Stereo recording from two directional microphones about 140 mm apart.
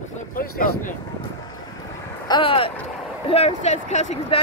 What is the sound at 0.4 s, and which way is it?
Speech, 85° left.